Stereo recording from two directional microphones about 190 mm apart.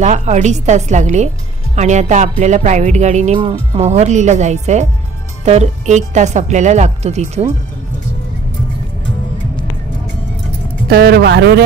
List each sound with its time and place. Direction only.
0.0 s speech: 40° right (ahead or behind)
10.9 s speech: 55° right (ahead or behind)